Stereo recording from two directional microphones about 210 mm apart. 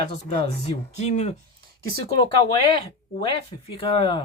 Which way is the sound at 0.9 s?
30° left (ahead or behind).